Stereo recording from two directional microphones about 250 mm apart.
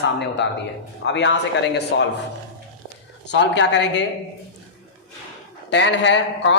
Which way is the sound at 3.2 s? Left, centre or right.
Left.